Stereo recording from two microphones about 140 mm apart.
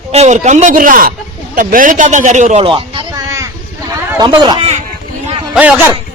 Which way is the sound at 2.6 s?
35° right (ahead or behind).